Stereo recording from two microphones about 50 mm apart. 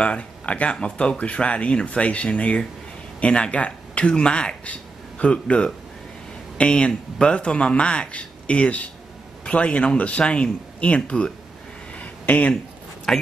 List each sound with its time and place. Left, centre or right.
0.0 s speech: left
12.0 s a sound: left
13.1 s speech: centre